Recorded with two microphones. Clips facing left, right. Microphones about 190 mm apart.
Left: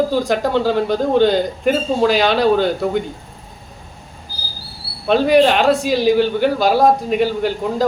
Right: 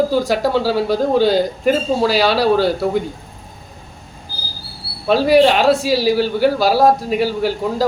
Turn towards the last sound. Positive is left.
turn(degrees=-5)  # may be behind; listen again after turning